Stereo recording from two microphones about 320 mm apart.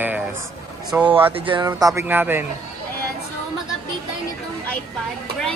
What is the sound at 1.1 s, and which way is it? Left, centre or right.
A man's voice, centre.